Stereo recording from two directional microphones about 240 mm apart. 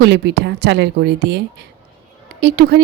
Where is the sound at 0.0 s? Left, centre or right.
Right.